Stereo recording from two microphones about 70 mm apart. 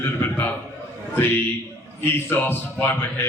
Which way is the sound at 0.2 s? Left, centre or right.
Left.